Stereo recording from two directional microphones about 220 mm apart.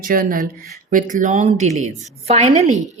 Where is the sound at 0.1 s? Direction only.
40° right (ahead or behind).